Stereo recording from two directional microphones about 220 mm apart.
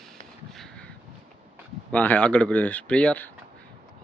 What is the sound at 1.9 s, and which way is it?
Speech, 5° left (ahead or behind).